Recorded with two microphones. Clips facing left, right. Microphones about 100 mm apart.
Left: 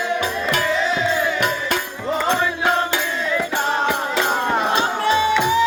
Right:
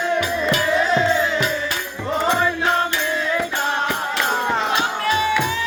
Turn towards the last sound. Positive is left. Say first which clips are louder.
# left 3 dB
turn(degrees=20)  # may be behind; listen again after turning